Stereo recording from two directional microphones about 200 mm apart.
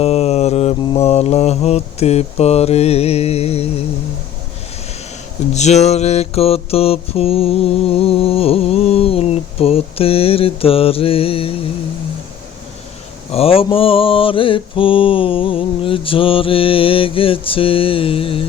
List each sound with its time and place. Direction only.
0.0 s mantra: 30° left (ahead or behind)
5.5 s mantra: 35° left (ahead or behind)
13.3 s mantra: 30° left (ahead or behind)